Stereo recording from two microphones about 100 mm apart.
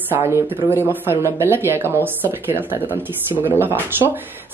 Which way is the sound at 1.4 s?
25° right (ahead or behind).